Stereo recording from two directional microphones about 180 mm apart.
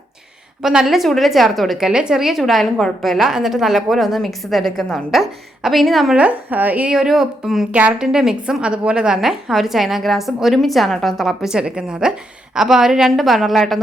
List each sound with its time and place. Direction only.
0.6 s a woman's voice: 5° right (ahead or behind)